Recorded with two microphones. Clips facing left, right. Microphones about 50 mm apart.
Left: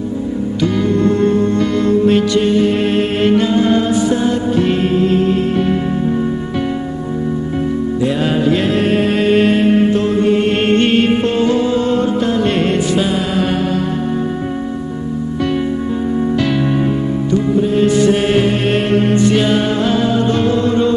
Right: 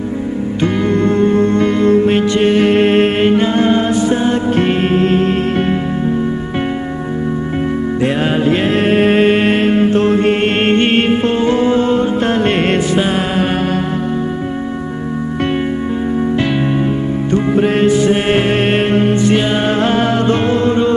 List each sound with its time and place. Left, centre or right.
0.6 s music: right
2.5 s music: right
3.2 s music: right
8.0 s music: right
9.6 s music: right
12.2 s music: right
16.3 s music: right
17.8 s music: right
19.0 s music: centre
19.6 s music: right
20.3 s music: right